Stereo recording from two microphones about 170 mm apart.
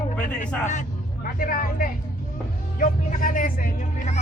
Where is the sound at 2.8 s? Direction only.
55° left (ahead or behind).